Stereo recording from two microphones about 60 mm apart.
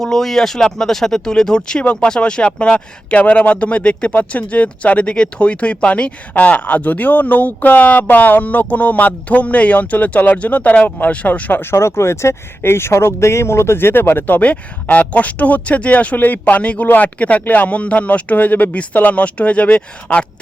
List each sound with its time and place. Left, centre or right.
0.0 s speech: centre; by 11.6 s left
11.6 s speech: left